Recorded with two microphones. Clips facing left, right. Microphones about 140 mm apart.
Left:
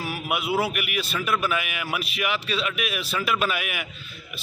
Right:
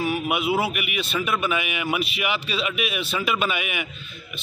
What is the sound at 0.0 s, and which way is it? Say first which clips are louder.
A man's voice: right 5 dB; centre (ahead or behind).